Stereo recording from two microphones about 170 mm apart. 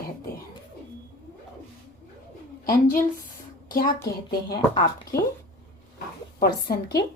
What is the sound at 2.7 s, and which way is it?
Speech, 55° left (ahead or behind).